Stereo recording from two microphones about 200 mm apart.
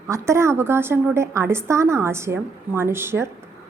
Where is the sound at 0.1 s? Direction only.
15° right (ahead or behind).